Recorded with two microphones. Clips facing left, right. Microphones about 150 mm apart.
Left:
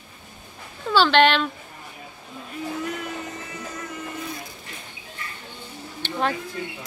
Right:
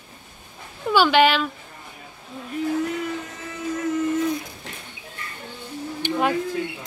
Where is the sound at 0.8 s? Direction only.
10° right (ahead or behind).